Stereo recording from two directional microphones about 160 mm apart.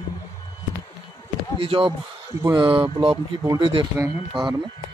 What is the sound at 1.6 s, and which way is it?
Speech, 35° right (ahead or behind).